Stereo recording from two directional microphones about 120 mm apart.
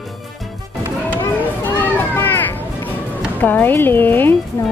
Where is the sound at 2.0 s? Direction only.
20° left (ahead or behind).